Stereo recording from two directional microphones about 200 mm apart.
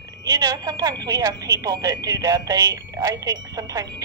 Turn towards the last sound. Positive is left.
turn(degrees=-15)  # may be behind; listen again after turning